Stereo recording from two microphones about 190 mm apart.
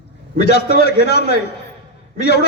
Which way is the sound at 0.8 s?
60° left (ahead or behind).